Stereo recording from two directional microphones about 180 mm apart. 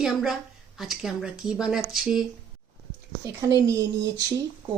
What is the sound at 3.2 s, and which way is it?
Speech, 20° right (ahead or behind).